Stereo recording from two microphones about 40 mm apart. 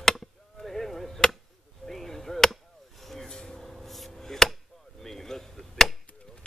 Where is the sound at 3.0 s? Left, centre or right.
Centre.